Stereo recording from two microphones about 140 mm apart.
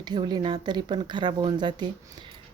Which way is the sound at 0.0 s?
30° right (ahead or behind).